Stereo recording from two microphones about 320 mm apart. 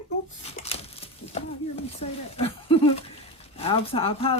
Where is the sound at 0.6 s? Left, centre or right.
Centre.